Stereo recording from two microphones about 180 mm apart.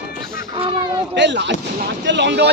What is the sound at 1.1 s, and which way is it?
Speech, 80° right.